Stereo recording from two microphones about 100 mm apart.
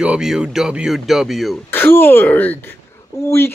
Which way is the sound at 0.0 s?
5° right (ahead or behind).